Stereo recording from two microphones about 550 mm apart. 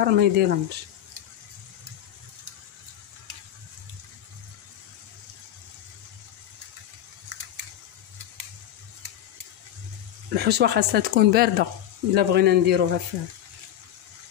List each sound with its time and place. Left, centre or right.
0.0 s speech: centre
10.3 s speech: centre